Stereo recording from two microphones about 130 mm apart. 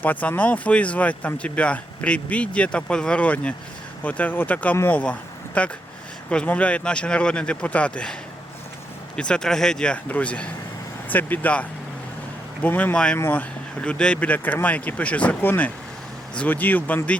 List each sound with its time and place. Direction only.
0.0 s speech: 10° left (ahead or behind)
9.1 s speech: 5° left (ahead or behind)
12.6 s speech: 10° left (ahead or behind)